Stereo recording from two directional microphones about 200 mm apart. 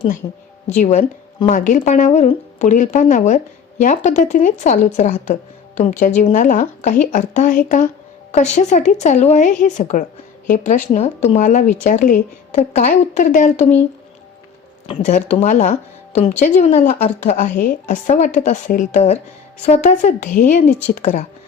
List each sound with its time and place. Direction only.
0.2 s speech: 30° left (ahead or behind)
14.8 s speech: 35° left (ahead or behind)